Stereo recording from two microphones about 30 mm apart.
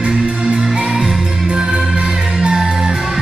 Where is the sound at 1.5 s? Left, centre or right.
Centre.